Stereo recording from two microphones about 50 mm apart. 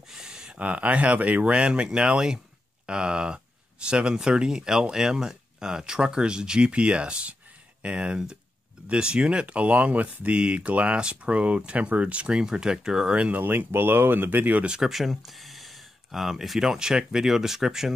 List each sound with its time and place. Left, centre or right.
0.1 s a sound: centre
0.6 s speech: right; by 13.1 s centre
13.1 s speech: right
13.4 s speech: right
14.7 s speech: centre